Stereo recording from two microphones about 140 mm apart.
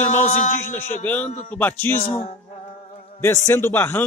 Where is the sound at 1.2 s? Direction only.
65° left (ahead or behind).